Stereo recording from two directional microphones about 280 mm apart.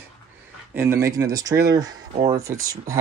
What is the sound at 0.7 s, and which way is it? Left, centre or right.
Speech, centre.